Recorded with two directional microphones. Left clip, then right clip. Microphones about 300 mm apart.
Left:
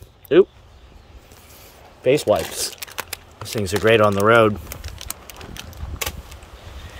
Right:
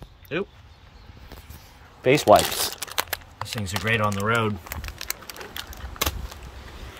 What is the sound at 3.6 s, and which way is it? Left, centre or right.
Speech, centre.